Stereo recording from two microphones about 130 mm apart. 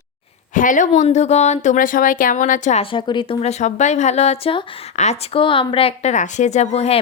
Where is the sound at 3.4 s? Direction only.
65° left (ahead or behind); by 4.6 s 45° left (ahead or behind).